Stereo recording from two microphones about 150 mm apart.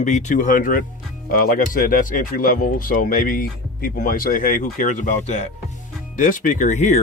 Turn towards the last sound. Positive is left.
turn(degrees=50)  # may be behind; listen again after turning